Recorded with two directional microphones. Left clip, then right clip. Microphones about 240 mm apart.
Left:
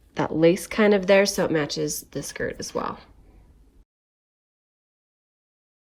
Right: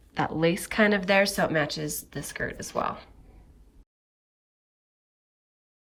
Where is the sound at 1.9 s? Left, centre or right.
Left.